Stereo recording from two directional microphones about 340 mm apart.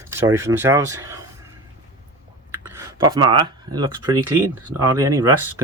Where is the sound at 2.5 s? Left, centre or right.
Centre.